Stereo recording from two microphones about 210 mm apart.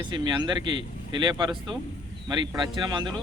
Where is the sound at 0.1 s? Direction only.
20° right (ahead or behind).